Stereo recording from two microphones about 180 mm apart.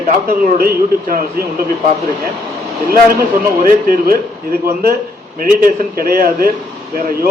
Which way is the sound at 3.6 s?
55° right (ahead or behind).